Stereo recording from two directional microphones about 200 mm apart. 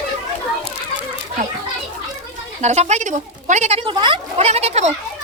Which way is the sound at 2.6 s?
35° right (ahead or behind).